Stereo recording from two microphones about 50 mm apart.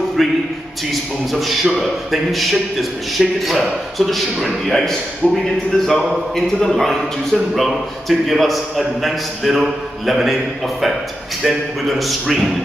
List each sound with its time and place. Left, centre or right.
0.2 s a man's voice: centre
5.2 s speech: centre
5.9 s a man's voice: centre
11.4 s a man's voice: centre